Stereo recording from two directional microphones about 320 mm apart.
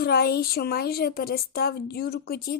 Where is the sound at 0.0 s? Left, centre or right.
Left.